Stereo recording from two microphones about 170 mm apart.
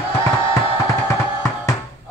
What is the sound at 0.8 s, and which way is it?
Music, 20° left (ahead or behind).